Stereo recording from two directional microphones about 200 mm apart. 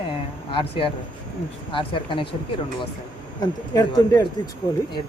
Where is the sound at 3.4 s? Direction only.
20° left (ahead or behind).